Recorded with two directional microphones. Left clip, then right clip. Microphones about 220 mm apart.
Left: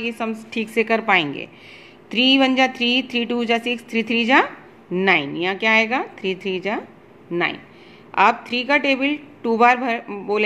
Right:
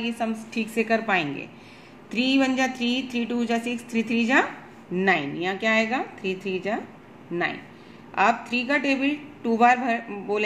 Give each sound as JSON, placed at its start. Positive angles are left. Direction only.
{"t": 0.0, "sound": "speech", "side_deg": 45}
{"t": 8.1, "sound": "speech", "side_deg": 40}